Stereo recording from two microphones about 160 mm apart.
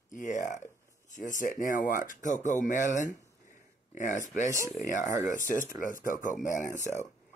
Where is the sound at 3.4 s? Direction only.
50° left (ahead or behind).